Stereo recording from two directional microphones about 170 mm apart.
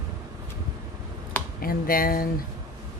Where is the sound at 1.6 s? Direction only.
60° left (ahead or behind).